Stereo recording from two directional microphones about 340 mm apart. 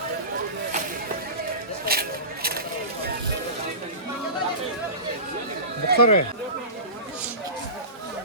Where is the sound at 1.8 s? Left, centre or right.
Right.